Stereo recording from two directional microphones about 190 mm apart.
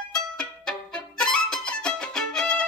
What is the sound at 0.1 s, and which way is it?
Music, 5° left (ahead or behind).